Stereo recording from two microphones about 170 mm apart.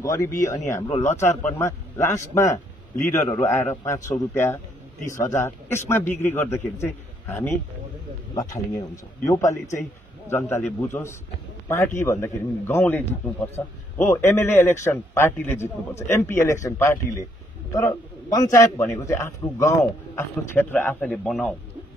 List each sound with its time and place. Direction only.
0.0 s a man's voice: 20° left (ahead or behind)
0.3 s speech: 50° left (ahead or behind)
1.2 s a man's voice: 15° left (ahead or behind)